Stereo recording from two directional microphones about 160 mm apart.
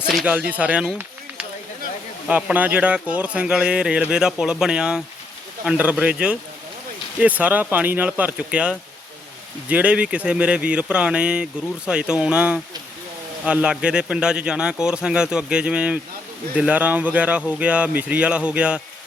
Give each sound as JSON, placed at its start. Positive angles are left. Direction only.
{"t": 0.1, "sound": "a man's voice", "side_deg": 0}
{"t": 0.3, "sound": "a man's voice", "side_deg": -10}